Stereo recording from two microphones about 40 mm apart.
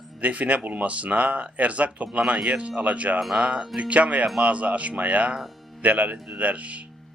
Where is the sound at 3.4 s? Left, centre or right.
Right.